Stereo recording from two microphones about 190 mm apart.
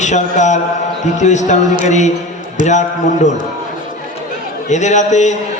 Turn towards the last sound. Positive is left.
turn(degrees=40)  # may be behind; listen again after turning